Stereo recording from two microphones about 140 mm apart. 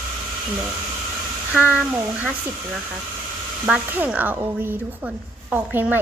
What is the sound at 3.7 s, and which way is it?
Speech, 10° right (ahead or behind).